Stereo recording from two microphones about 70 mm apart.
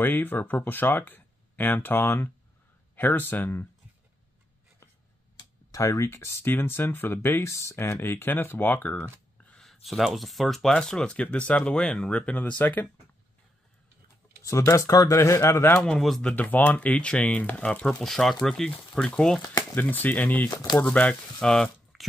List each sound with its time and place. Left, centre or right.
0.0 s speech: left
5.8 s speech: left
9.6 s speech: centre; by 12.8 s left
14.4 s speech: left
15.4 s speech: left
16.2 s speech: left
18.0 s speech: centre
19.7 s speech: left
21.9 s a sound: centre